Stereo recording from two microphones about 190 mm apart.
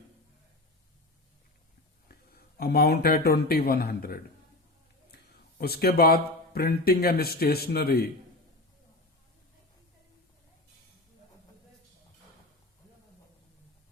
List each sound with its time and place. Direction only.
2.6 s a man's voice: 55° left (ahead or behind)